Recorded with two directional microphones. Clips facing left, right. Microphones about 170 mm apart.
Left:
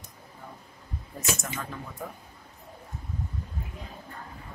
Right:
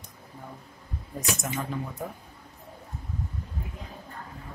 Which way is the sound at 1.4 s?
20° right (ahead or behind).